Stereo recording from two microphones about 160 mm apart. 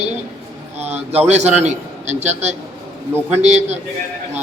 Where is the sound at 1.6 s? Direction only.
45° right (ahead or behind).